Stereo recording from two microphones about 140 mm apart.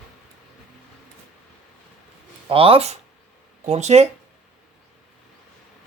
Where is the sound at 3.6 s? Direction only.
55° right (ahead or behind).